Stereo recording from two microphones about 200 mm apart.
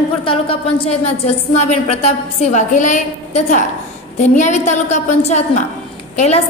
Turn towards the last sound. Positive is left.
turn(degrees=35)  # may be behind; listen again after turning